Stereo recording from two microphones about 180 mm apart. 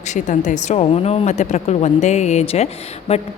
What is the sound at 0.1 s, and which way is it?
A woman's voice, 40° left (ahead or behind).